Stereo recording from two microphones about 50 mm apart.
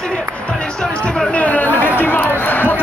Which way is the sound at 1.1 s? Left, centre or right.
Left.